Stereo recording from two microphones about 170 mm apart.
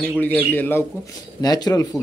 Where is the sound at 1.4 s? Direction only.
25° left (ahead or behind).